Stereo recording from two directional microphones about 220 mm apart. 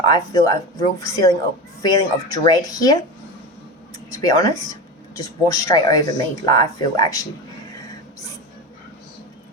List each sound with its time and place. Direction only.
0.0 s speech: 20° left (ahead or behind)
4.1 s speech: 15° left (ahead or behind)